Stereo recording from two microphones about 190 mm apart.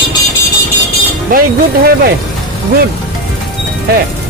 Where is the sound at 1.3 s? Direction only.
50° right (ahead or behind).